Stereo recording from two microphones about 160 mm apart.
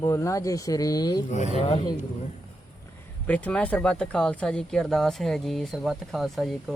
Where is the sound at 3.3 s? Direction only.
10° left (ahead or behind).